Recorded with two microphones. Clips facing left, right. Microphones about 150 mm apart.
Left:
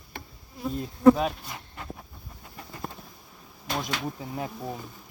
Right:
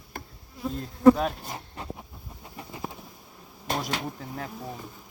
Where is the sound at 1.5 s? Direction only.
35° right (ahead or behind).